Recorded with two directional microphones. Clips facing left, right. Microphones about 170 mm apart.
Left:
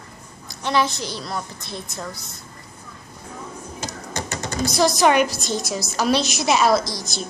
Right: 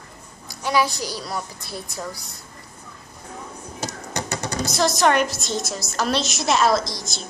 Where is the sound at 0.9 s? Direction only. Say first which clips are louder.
Even; 35° right (ahead or behind).